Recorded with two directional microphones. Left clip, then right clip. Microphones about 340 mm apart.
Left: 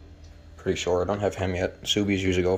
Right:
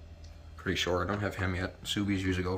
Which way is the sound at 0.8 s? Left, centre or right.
Centre.